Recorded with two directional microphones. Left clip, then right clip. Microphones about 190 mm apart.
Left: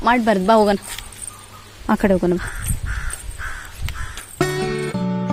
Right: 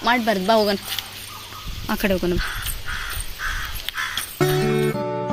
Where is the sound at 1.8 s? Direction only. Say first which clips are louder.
Left 5 dB; 25° left (ahead or behind).